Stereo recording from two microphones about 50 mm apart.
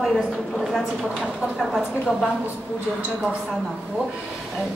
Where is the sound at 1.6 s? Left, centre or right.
Centre.